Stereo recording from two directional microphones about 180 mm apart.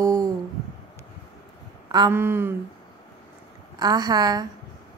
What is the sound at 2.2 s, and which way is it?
Speech, 15° right (ahead or behind).